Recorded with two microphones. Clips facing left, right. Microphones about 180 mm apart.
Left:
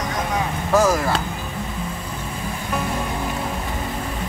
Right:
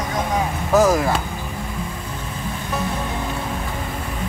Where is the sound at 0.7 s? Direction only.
20° right (ahead or behind).